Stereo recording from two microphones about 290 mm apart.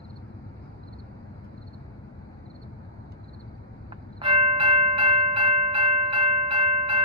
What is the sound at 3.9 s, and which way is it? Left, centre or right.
Tubular bells, centre.